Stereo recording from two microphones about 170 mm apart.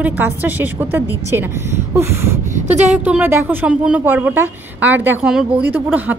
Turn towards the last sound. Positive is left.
turn(degrees=-10)  # may be behind; listen again after turning